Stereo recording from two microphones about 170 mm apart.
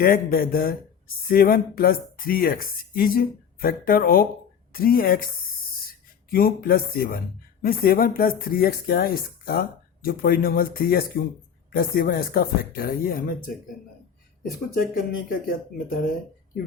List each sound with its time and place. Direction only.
0.0 s speech: 60° left (ahead or behind)
6.3 s speech: 60° left (ahead or behind)
14.7 s speech: 55° left (ahead or behind)